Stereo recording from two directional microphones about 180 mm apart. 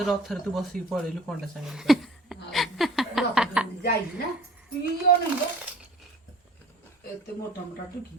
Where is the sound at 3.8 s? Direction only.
60° left (ahead or behind).